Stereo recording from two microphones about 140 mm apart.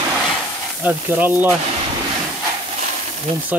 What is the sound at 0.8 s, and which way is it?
Speech, 10° right (ahead or behind).